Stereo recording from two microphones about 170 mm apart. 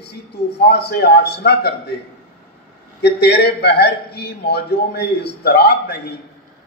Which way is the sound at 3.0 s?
75° left (ahead or behind).